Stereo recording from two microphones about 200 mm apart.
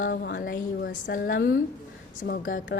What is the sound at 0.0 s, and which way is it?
A woman's voice, 55° left (ahead or behind).